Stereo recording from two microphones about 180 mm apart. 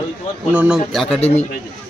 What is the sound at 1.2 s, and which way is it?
Speech, 35° left (ahead or behind).